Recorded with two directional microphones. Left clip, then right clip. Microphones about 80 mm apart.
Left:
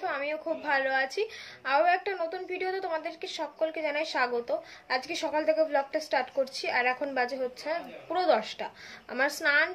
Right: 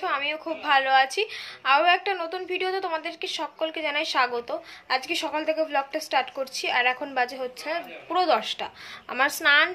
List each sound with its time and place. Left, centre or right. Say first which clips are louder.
0.0 s a woman's voice: right 4 dB; left